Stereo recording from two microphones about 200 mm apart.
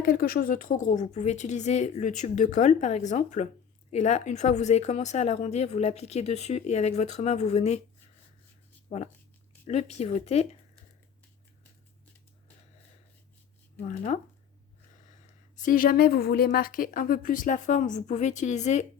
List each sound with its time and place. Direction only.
0.0 s speech: 50° left (ahead or behind)
8.9 s speech: 35° left (ahead or behind)
13.8 s speech: 35° left (ahead or behind)
15.5 s speech: 45° left (ahead or behind)